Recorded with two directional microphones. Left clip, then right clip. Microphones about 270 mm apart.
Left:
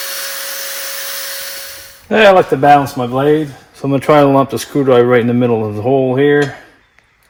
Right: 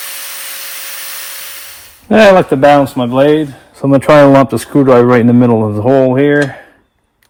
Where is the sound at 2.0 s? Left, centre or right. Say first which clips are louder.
Right 2 dB; right.